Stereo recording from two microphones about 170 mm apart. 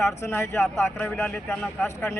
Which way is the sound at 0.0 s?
15° left (ahead or behind).